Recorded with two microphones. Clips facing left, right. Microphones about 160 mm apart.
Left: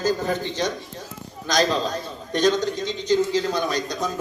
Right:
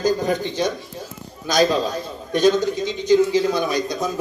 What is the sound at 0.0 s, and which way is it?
A man's voice, 15° right (ahead or behind).